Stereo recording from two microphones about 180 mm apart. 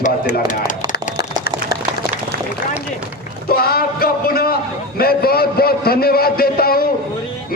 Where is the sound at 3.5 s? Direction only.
60° left (ahead or behind).